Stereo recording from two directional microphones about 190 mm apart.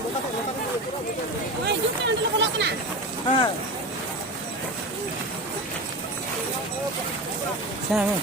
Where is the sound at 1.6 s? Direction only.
65° right (ahead or behind).